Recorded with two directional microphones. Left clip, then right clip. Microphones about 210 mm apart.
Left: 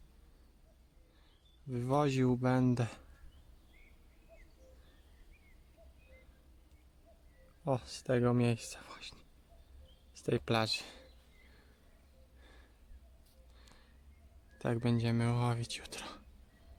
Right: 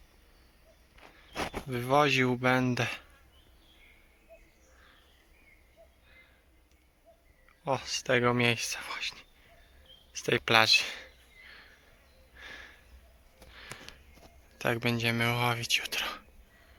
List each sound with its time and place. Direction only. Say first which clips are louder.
1.7 s speech: right 8 dB; 5° left (ahead or behind)
7.6 s speech: right 5 dB; 5° left (ahead or behind)
12.4 s a sound: right 18 dB; 5° left (ahead or behind)
14.6 s speech: right 7 dB; 5° left (ahead or behind)